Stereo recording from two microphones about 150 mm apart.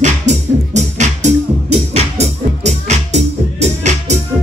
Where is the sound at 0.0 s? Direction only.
50° right (ahead or behind).